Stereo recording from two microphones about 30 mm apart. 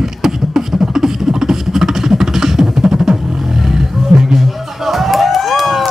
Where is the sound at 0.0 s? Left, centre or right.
Centre.